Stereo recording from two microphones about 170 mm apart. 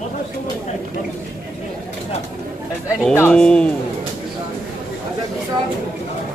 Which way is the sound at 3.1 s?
10° left (ahead or behind).